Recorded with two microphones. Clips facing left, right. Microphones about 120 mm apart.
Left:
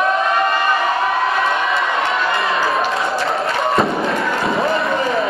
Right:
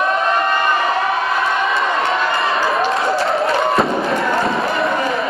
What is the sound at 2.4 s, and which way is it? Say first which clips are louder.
Fireworks: right 1 dB; centre (ahead or behind).